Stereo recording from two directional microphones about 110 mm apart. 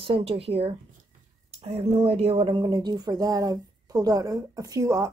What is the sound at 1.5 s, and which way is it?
A woman's voice, 75° right (ahead or behind).